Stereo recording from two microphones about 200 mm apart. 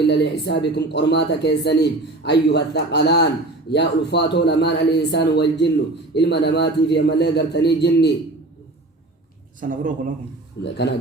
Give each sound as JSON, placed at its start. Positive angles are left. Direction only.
{"t": 0.0, "sound": "speech", "side_deg": 55}
{"t": 9.6, "sound": "a man's voice", "side_deg": -40}
{"t": 10.6, "sound": "speech", "side_deg": 55}